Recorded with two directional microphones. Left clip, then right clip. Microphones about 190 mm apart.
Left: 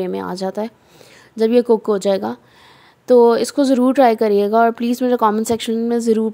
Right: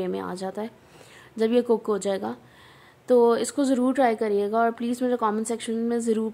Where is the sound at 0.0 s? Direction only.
30° left (ahead or behind).